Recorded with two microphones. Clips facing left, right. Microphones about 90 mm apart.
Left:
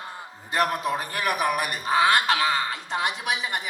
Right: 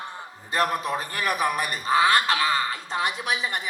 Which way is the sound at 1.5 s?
20° left (ahead or behind).